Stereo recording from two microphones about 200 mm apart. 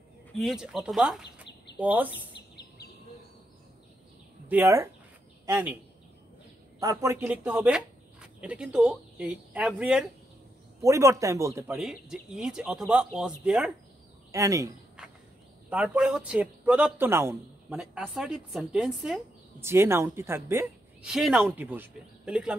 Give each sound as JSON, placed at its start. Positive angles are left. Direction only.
{"t": 0.4, "sound": "speech", "side_deg": 0}
{"t": 4.5, "sound": "speech", "side_deg": -10}
{"t": 6.8, "sound": "speech", "side_deg": -15}
{"t": 10.8, "sound": "speech", "side_deg": -15}
{"t": 11.7, "sound": "speech", "side_deg": 0}
{"t": 14.3, "sound": "speech", "side_deg": -15}
{"t": 15.0, "sound": "a sound", "side_deg": -5}
{"t": 15.7, "sound": "speech", "side_deg": -5}
{"t": 21.1, "sound": "speech", "side_deg": 0}